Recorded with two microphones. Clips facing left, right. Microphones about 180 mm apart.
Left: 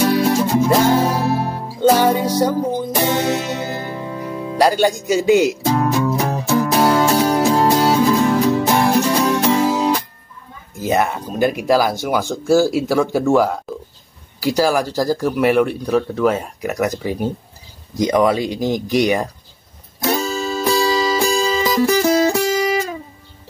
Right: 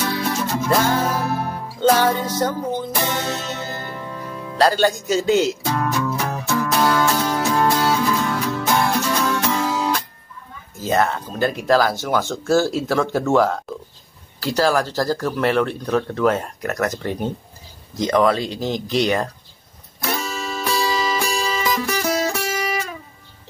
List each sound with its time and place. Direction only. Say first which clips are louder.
0.1 s music: left 8 dB; 25° left (ahead or behind)
0.4 s music: left 5 dB; 15° left (ahead or behind)
10.8 s speech: left 2 dB; 15° left (ahead or behind)
20.0 s music: left 6 dB; 25° left (ahead or behind)